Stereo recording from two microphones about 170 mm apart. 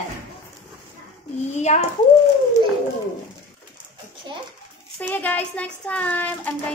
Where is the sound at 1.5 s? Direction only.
40° left (ahead or behind).